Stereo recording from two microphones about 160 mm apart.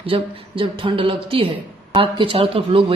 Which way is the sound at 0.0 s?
35° right (ahead or behind).